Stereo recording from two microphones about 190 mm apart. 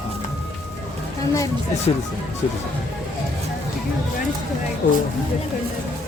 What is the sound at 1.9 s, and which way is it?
Speech, 30° left (ahead or behind).